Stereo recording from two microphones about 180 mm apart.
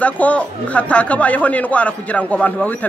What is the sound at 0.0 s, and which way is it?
Speech, 5° left (ahead or behind).